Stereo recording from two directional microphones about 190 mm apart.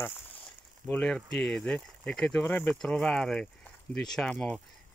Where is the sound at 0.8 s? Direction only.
5° left (ahead or behind).